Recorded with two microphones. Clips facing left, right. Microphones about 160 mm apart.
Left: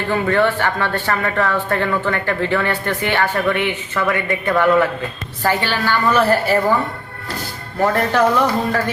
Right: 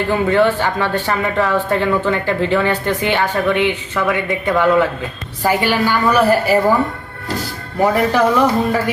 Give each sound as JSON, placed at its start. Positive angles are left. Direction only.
{"t": 0.1, "sound": "speech", "side_deg": -15}
{"t": 7.8, "sound": "speech", "side_deg": -10}